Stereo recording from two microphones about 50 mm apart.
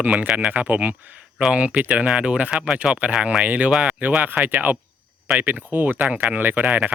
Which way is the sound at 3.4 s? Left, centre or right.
Right.